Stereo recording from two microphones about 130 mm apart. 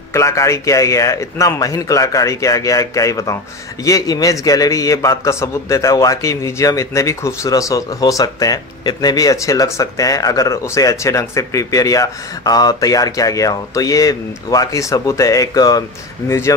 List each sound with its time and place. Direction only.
0.1 s a man's voice: 20° left (ahead or behind)